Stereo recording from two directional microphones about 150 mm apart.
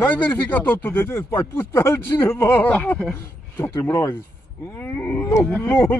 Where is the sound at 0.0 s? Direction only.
10° left (ahead or behind).